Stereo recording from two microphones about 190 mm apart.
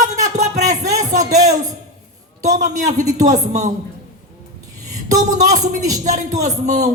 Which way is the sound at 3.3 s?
40° right (ahead or behind).